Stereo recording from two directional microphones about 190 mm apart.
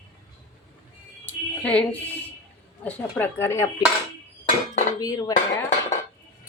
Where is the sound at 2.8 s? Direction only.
10° left (ahead or behind).